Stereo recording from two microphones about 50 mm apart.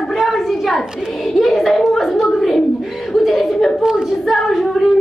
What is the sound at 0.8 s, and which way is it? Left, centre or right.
Hands, centre.